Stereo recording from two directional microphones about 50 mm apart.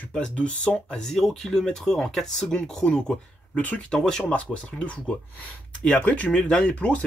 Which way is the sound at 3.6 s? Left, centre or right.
Left.